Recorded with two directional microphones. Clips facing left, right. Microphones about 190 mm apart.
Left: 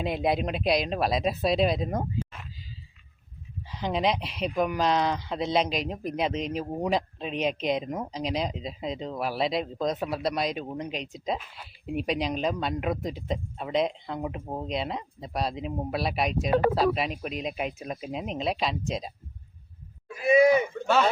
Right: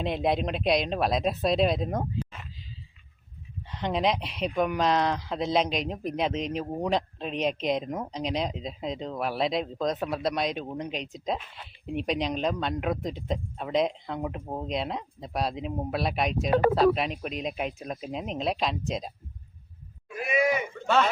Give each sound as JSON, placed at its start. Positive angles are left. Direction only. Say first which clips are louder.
{"t": 0.0, "sound": "speech", "louder": "even", "side_deg": 5}
{"t": 3.7, "sound": "speech", "louder": "even", "side_deg": 0}
{"t": 20.2, "sound": "speech", "louder": "left 7 dB", "side_deg": 30}